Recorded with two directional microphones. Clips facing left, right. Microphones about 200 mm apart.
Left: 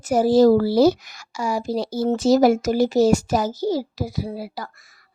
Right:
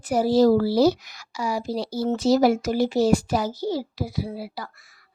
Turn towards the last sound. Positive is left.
turn(degrees=45)  # may be behind; listen again after turning